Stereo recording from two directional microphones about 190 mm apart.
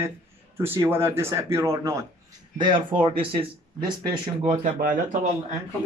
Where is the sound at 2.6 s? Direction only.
25° right (ahead or behind).